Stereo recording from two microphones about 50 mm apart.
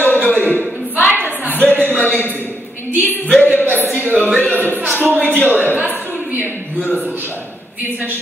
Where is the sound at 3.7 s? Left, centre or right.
Left.